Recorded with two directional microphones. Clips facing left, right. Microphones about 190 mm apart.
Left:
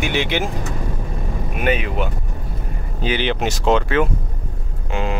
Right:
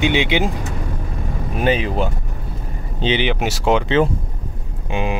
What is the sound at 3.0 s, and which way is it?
Speech, 20° right (ahead or behind).